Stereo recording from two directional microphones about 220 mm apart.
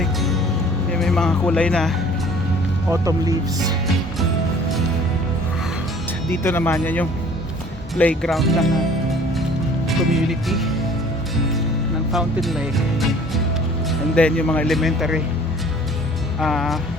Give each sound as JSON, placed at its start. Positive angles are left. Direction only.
{"t": 0.0, "sound": "music", "side_deg": 0}
{"t": 0.9, "sound": "speech", "side_deg": 0}
{"t": 2.9, "sound": "speech", "side_deg": -15}
{"t": 6.3, "sound": "speech", "side_deg": 10}
{"t": 10.1, "sound": "speech", "side_deg": 0}
{"t": 12.1, "sound": "speech", "side_deg": 0}
{"t": 16.4, "sound": "speech", "side_deg": 0}